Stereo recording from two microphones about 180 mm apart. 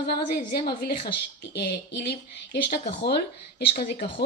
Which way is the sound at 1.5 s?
70° left (ahead or behind).